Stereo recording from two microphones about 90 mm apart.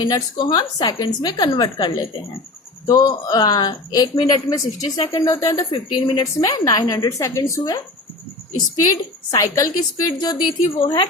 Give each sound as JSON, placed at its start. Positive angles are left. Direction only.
{"t": 0.0, "sound": "a woman's voice", "side_deg": 50}
{"t": 5.1, "sound": "a woman's voice", "side_deg": 40}
{"t": 5.7, "sound": "a woman's voice", "side_deg": 65}
{"t": 6.4, "sound": "a woman's voice", "side_deg": 45}